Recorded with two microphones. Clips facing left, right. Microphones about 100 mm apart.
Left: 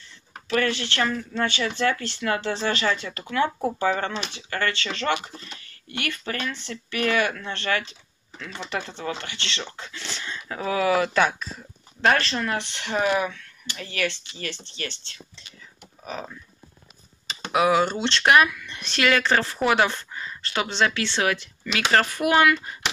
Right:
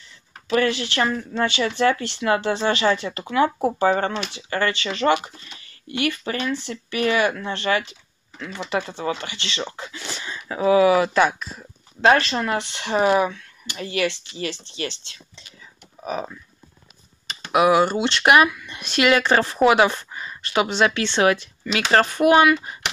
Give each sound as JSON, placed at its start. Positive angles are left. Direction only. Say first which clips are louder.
{"t": 0.5, "sound": "speech", "louder": "right 3 dB", "side_deg": -10}
{"t": 3.8, "sound": "speech", "louder": "right 5 dB", "side_deg": -35}
{"t": 4.1, "sound": "speech", "louder": "right 4 dB", "side_deg": -15}
{"t": 12.9, "sound": "speech", "louder": "right 5 dB", "side_deg": -30}
{"t": 13.7, "sound": "speech", "louder": "right 5 dB", "side_deg": -15}
{"t": 17.5, "sound": "speech", "louder": "right 4 dB", "side_deg": -15}